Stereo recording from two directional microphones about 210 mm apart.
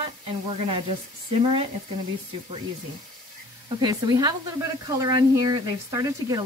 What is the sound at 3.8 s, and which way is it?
Speech, 20° right (ahead or behind).